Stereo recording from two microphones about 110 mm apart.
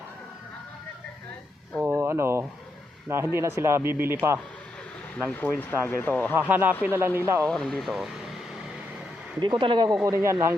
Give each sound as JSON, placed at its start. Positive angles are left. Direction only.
{"t": 1.8, "sound": "a sound", "side_deg": -20}
{"t": 3.1, "sound": "speech", "side_deg": -20}
{"t": 5.5, "sound": "speech", "side_deg": 15}
{"t": 6.3, "sound": "speech", "side_deg": -15}
{"t": 7.4, "sound": "speech", "side_deg": 5}
{"t": 9.4, "sound": "speech", "side_deg": -45}
{"t": 10.0, "sound": "speech", "side_deg": -25}